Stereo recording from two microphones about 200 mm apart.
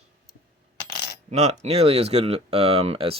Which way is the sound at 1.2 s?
35° right (ahead or behind).